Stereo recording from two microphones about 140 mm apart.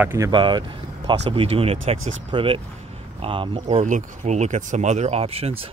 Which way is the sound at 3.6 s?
55° right (ahead or behind).